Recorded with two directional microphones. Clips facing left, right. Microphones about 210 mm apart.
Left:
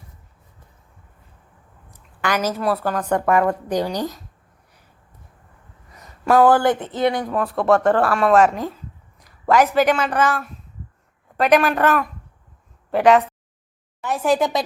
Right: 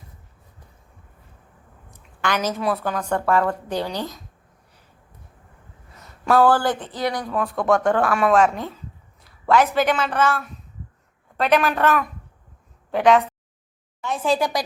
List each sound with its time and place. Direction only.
2.2 s a woman's voice: 10° left (ahead or behind)
3.1 s a woman's voice: 15° left (ahead or behind)
6.0 s speech: 10° left (ahead or behind)
7.3 s a woman's voice: centre (ahead or behind)
14.0 s a sound: 10° left (ahead or behind)
14.3 s speech: 20° left (ahead or behind)